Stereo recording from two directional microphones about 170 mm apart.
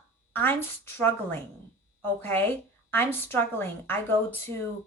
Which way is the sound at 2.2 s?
10° left (ahead or behind).